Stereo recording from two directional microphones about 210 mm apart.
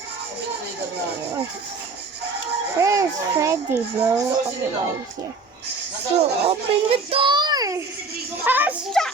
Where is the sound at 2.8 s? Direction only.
15° right (ahead or behind).